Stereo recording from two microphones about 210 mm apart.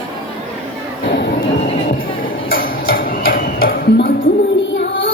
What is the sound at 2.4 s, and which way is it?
Tick-tock, 65° left (ahead or behind).